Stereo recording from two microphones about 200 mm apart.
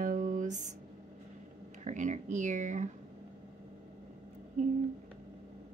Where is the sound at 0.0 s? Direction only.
40° right (ahead or behind).